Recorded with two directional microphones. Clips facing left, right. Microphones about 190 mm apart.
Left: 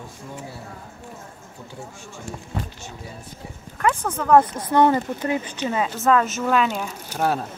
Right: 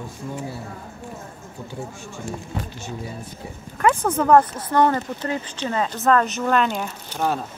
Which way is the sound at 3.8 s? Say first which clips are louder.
Right 4 dB; 15° right (ahead or behind).